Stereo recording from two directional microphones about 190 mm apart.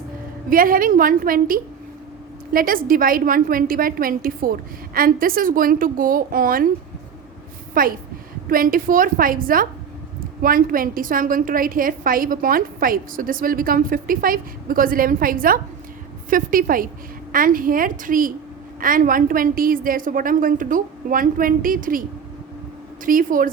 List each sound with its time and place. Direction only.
0.5 s a woman's voice: 50° right (ahead or behind)
7.7 s a woman's voice: 50° right (ahead or behind)
23.0 s a woman's voice: 45° right (ahead or behind)